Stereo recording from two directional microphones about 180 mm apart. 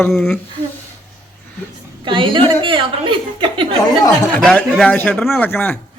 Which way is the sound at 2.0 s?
25° right (ahead or behind).